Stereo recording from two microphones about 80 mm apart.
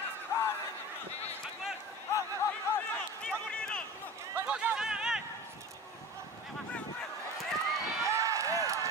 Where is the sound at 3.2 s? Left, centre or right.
Centre.